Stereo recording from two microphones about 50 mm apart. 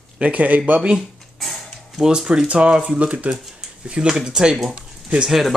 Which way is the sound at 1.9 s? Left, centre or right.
Centre.